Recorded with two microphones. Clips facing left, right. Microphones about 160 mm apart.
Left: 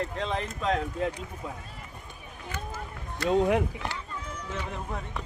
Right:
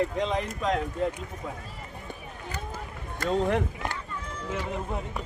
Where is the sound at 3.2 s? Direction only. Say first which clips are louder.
Left 2 dB; 10° left (ahead or behind).